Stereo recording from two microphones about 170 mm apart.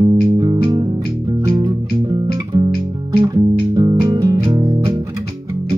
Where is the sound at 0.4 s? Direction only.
25° right (ahead or behind).